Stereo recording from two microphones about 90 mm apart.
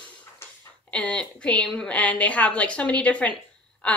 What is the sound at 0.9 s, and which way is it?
A woman's voice, 15° left (ahead or behind).